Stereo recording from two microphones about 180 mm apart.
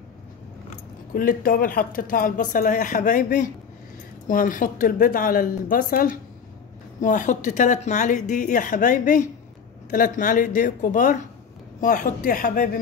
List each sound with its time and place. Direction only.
1.1 s speech: 50° left (ahead or behind)